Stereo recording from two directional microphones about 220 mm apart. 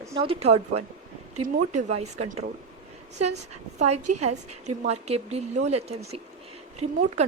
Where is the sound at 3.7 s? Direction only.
30° right (ahead or behind).